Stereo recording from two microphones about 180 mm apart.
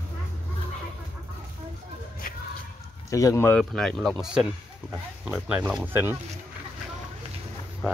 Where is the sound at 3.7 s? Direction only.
Centre (ahead or behind).